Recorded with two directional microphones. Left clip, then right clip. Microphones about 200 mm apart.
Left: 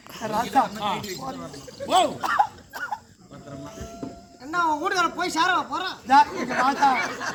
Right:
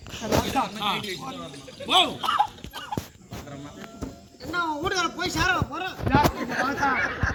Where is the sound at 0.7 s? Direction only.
15° left (ahead or behind).